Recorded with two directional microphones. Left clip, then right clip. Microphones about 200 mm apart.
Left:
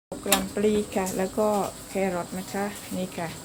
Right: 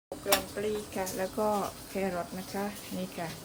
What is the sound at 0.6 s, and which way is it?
Speech, 20° left (ahead or behind).